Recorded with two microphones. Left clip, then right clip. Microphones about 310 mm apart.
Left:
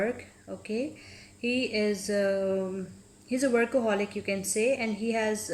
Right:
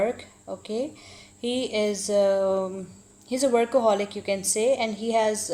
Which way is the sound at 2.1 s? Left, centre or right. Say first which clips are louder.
Right 7 dB; right.